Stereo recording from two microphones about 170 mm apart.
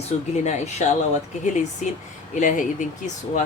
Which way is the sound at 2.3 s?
50° left (ahead or behind).